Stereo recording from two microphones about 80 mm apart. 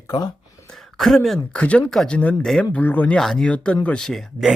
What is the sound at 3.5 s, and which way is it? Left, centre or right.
Speech, centre.